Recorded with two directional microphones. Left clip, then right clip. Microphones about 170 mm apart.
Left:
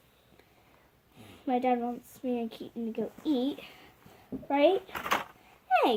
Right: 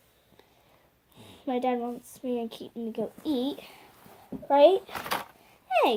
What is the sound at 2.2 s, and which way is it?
A child's voice, 40° right (ahead or behind).